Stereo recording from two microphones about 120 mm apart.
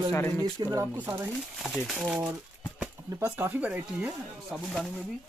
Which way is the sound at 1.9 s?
5° right (ahead or behind).